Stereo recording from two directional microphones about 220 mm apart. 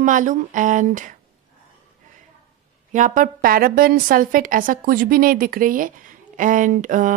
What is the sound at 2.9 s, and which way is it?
Speech, 35° right (ahead or behind).